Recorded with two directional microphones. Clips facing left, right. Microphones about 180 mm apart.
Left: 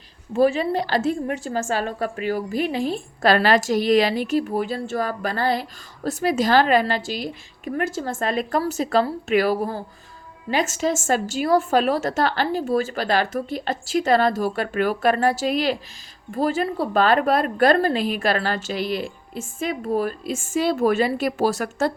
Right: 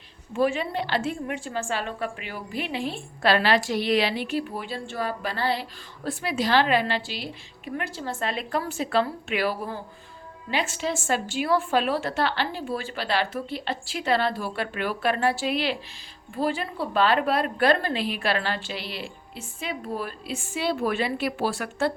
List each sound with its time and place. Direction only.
0.3 s speech: 35° left (ahead or behind)